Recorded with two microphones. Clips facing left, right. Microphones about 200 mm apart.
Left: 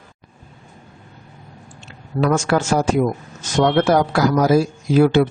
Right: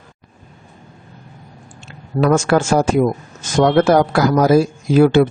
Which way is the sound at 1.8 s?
50° right (ahead or behind).